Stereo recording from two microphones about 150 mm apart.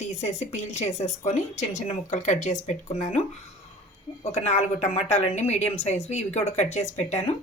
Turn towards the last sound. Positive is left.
turn(degrees=45)  # may be behind; listen again after turning